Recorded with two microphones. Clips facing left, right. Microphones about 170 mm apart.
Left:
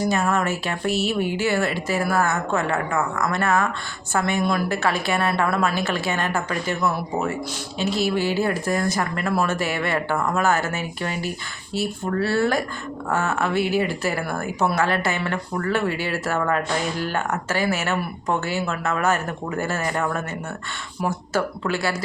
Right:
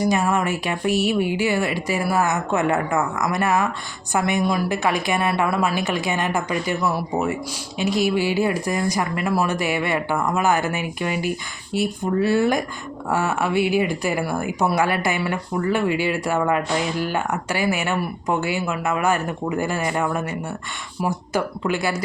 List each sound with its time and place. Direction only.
0.0 s speech: 15° right (ahead or behind)